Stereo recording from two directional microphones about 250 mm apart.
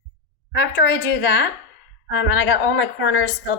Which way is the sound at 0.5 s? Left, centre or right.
Left.